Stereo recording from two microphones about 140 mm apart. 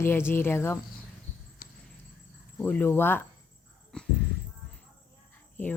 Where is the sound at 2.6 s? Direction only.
10° left (ahead or behind).